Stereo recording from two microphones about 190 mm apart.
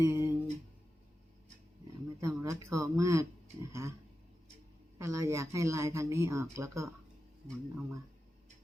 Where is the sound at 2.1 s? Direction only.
15° right (ahead or behind).